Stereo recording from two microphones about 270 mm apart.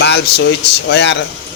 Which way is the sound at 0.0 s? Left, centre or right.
Left.